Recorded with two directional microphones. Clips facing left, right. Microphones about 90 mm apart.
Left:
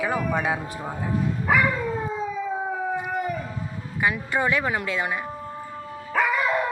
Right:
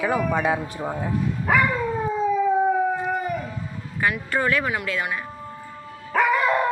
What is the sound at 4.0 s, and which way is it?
Speech, 15° left (ahead or behind).